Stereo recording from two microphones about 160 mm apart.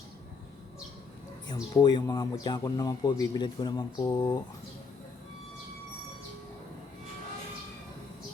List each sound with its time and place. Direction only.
1.5 s speech: 25° left (ahead or behind)